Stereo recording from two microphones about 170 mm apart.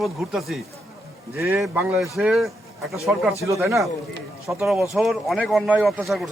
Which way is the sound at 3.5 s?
20° right (ahead or behind).